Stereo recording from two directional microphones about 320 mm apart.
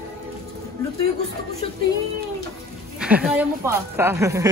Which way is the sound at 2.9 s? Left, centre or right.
Centre.